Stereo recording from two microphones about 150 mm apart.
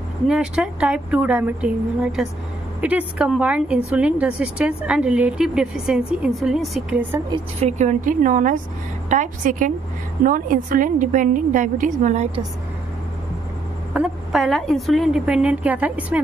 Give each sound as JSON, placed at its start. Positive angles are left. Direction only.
{"t": 0.3, "sound": "a woman's voice", "side_deg": -5}
{"t": 7.6, "sound": "a woman's voice", "side_deg": -50}
{"t": 13.9, "sound": "a woman's voice", "side_deg": -5}